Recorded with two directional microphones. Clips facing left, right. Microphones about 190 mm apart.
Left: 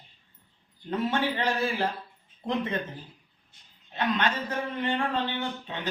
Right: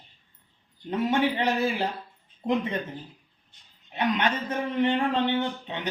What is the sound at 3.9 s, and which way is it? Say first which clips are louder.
Speech: right 2 dB; 15° right (ahead or behind).